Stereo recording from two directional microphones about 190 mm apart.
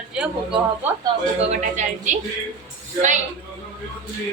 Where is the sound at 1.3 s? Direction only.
35° right (ahead or behind).